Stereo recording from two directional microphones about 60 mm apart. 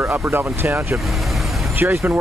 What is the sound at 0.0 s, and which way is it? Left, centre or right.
Speech, right.